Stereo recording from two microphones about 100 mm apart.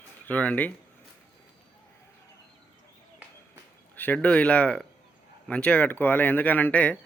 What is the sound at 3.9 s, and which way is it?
Speech, 15° left (ahead or behind).